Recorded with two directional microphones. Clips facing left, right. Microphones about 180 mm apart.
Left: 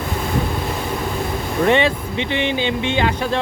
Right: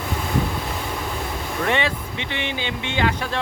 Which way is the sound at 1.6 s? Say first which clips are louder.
Left 7 dB; 25° left (ahead or behind).